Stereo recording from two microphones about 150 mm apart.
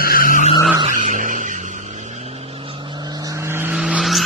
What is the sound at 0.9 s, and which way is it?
Vehicle, 60° right (ahead or behind).